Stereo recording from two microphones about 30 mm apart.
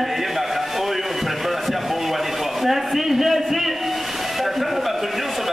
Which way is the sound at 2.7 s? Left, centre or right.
Centre.